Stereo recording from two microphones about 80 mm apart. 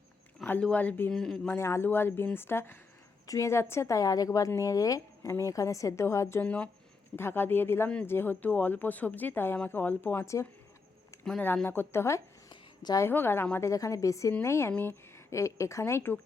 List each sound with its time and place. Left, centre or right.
0.6 s speech: centre
1.1 s speech: centre
1.5 s a woman's voice: left
6.4 s speech: centre
11.3 s speech: left
12.5 s a sound: left
13.0 s speech: left
13.7 s a woman's voice: left